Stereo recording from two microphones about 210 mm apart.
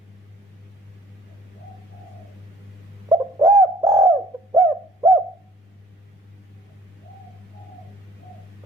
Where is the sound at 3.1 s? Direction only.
20° right (ahead or behind).